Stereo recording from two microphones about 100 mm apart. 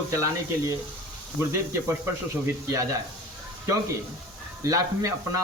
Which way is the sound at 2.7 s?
35° right (ahead or behind).